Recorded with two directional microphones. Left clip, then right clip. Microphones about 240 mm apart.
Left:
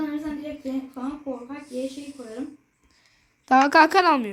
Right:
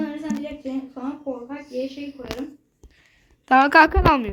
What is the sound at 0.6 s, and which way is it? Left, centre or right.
Speech, centre.